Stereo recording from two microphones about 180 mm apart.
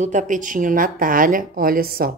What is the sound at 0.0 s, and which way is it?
A woman's voice, 40° right (ahead or behind).